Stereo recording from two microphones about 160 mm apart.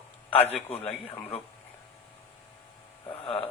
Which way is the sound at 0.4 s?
35° left (ahead or behind).